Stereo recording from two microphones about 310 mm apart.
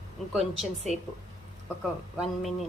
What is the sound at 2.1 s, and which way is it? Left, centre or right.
Speech, centre.